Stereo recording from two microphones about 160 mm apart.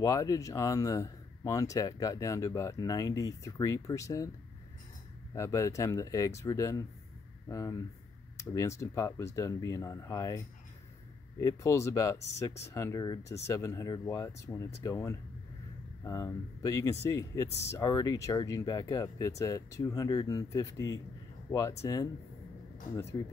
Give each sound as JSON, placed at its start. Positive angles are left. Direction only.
{"t": 0.0, "sound": "speech", "side_deg": 20}
{"t": 5.3, "sound": "speech", "side_deg": 20}